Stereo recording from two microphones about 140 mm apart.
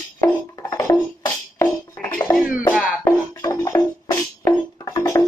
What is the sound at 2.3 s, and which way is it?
Music, 5° right (ahead or behind).